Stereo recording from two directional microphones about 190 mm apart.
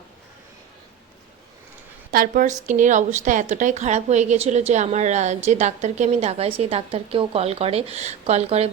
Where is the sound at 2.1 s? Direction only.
45° right (ahead or behind).